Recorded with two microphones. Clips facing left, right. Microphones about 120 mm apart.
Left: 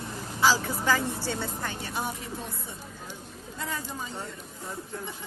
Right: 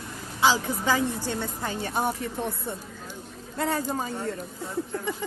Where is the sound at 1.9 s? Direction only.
55° right (ahead or behind).